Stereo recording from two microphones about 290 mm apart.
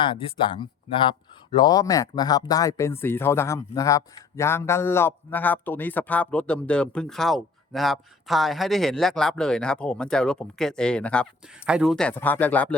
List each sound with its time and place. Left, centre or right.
0.0 s speech: centre